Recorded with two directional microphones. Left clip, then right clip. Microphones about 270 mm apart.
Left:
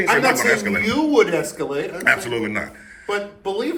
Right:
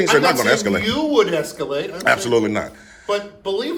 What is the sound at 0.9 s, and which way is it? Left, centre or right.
Speech, centre.